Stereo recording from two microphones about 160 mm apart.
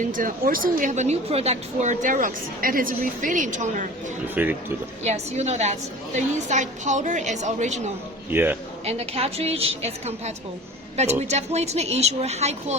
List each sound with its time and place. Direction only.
0.0 s a woman's voice: 55° right (ahead or behind)
4.4 s a man's voice: 10° right (ahead or behind)
5.0 s a woman's voice: 45° right (ahead or behind)
8.3 s a man's voice: 10° right (ahead or behind)
8.8 s a woman's voice: 40° right (ahead or behind)